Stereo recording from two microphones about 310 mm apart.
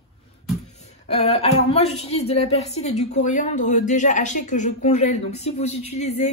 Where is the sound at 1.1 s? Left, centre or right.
Centre.